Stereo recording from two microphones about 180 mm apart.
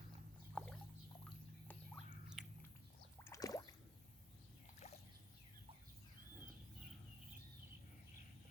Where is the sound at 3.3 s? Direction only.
20° left (ahead or behind).